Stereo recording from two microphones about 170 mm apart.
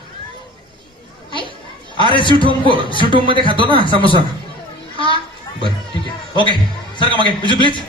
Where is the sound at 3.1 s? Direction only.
30° right (ahead or behind).